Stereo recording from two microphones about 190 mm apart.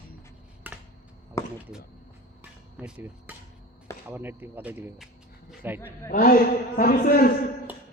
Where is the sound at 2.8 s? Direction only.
10° right (ahead or behind).